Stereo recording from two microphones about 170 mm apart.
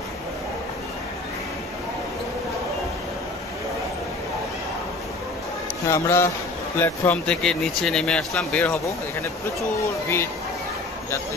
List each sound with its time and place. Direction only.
5.9 s speech: 15° left (ahead or behind)